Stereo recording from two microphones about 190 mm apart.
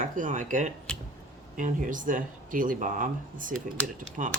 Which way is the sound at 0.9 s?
5° left (ahead or behind).